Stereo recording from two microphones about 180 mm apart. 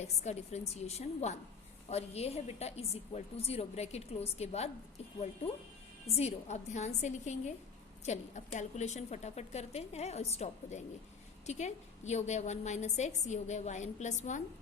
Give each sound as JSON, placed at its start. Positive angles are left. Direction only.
{"t": 0.0, "sound": "a woman's voice", "side_deg": 35}
{"t": 6.1, "sound": "a woman's voice", "side_deg": 35}